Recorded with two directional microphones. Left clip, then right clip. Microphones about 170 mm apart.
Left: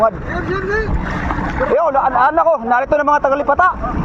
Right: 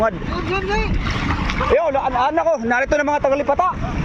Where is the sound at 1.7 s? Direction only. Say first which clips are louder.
Left 4 dB; 20° right (ahead or behind); by 3.7 s 5° right (ahead or behind).